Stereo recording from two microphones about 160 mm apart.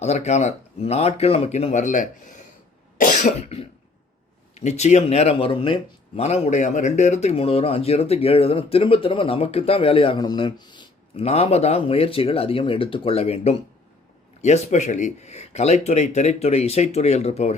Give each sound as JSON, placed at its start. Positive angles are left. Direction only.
{"t": 0.0, "sound": "speech", "side_deg": 45}
{"t": 3.0, "sound": "cough", "side_deg": 55}
{"t": 4.5, "sound": "speech", "side_deg": 45}
{"t": 11.3, "sound": "speech", "side_deg": 40}